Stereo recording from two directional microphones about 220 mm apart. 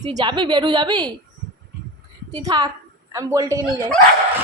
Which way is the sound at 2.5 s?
20° right (ahead or behind).